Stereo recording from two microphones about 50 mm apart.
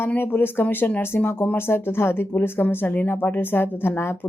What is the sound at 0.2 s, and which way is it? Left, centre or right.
Speech, left.